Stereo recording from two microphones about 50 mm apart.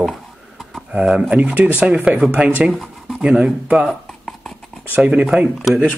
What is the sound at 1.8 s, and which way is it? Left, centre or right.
Speech, centre.